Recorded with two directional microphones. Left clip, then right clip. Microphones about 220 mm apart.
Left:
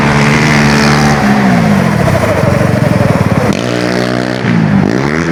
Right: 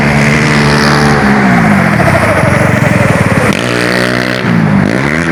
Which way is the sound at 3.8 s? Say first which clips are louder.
Right 3 dB; 15° right (ahead or behind).